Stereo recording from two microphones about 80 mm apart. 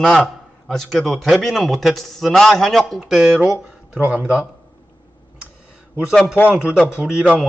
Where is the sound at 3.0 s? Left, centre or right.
Centre.